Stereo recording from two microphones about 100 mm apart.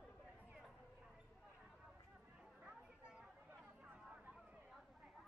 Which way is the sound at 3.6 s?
20° right (ahead or behind).